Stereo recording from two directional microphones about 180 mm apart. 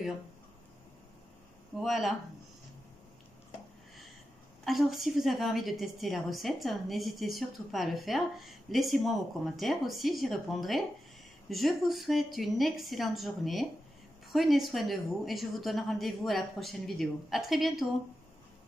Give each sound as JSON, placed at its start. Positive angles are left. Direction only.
{"t": 1.8, "sound": "a woman's voice", "side_deg": 0}
{"t": 4.6, "sound": "a woman's voice", "side_deg": 0}